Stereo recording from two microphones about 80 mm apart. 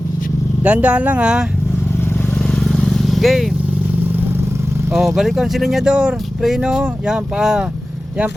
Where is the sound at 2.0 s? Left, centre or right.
Left.